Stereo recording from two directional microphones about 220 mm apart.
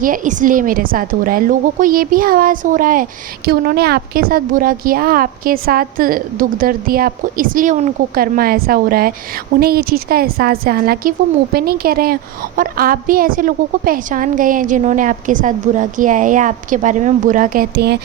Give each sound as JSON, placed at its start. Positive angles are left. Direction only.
{"t": 0.0, "sound": "a woman's voice", "side_deg": -35}